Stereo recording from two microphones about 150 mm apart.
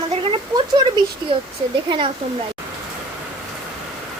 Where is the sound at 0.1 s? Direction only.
35° right (ahead or behind).